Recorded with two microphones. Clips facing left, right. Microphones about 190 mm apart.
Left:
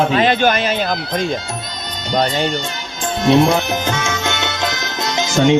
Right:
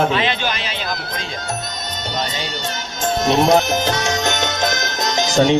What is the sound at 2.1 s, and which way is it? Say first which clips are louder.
Speech: left 10 dB; 50° left (ahead or behind).